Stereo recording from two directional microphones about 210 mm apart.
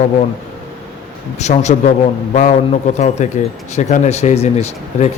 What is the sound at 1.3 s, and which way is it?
Speech, 35° left (ahead or behind).